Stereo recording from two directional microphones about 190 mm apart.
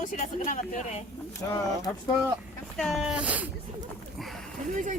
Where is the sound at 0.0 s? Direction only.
40° left (ahead or behind).